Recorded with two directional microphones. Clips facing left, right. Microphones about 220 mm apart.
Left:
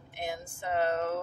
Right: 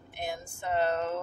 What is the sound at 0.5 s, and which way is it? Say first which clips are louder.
Speech: right 1 dB; 10° left (ahead or behind).